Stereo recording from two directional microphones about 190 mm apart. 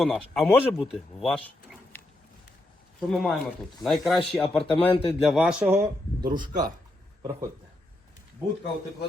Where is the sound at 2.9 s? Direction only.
Centre (ahead or behind); by 6.3 s 15° right (ahead or behind).